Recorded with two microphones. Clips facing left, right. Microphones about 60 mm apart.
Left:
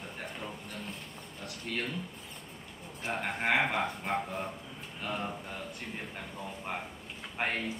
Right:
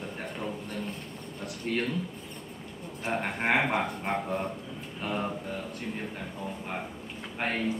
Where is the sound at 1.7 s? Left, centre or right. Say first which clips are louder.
Right 6 dB; right.